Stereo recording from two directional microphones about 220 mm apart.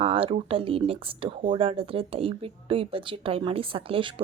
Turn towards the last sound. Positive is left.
turn(degrees=-25)  # may be behind; listen again after turning